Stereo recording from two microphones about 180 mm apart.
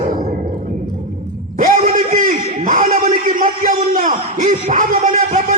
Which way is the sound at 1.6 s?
45° right (ahead or behind).